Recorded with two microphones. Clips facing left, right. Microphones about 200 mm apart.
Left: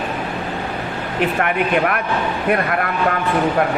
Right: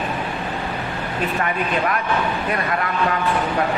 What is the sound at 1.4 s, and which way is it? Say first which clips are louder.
A man's voice: left 4 dB; 55° left (ahead or behind).